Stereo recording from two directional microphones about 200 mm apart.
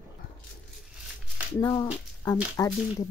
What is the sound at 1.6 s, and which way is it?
Speech, 20° left (ahead or behind).